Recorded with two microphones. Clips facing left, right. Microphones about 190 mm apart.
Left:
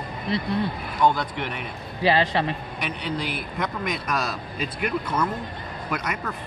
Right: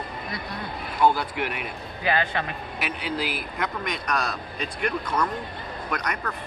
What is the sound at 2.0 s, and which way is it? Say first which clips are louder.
Speech: left 5 dB; 30° left (ahead or behind).